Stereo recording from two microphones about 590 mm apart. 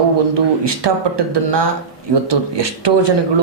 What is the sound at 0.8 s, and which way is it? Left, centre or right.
Speech, right.